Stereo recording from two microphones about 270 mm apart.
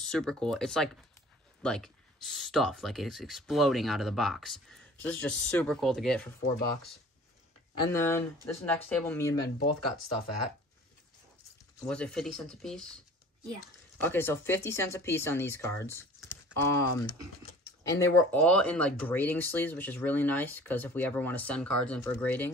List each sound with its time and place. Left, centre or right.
0.0 s speech: centre
7.8 s speech: centre
9.8 s speech: left
11.9 s speech: centre
13.9 s speech: centre